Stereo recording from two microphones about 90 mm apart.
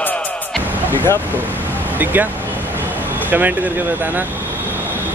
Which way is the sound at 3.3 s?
20° right (ahead or behind).